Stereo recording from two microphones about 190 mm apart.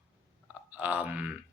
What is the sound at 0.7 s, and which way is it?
Speech, 10° right (ahead or behind).